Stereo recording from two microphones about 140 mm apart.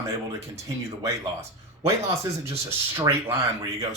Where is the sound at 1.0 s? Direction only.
20° right (ahead or behind).